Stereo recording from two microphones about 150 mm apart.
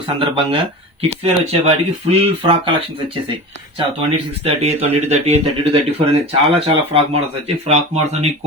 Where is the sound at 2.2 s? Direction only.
40° right (ahead or behind).